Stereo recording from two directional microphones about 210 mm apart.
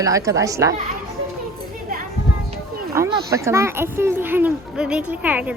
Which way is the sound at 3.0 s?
15° right (ahead or behind).